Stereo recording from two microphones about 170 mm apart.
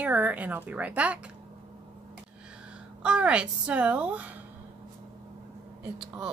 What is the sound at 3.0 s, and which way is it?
Speech, 5° right (ahead or behind).